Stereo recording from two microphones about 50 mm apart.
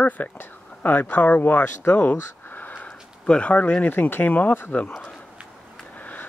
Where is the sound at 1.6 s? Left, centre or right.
Left.